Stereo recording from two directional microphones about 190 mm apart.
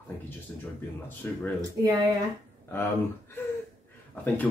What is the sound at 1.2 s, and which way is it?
Speech, 10° left (ahead or behind).